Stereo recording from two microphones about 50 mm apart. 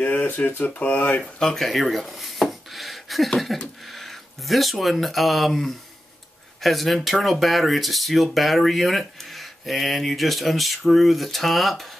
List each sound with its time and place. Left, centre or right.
0.0 s speech: left
1.2 s speech: centre